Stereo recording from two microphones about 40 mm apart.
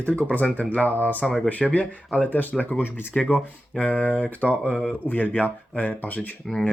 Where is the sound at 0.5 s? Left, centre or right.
Left.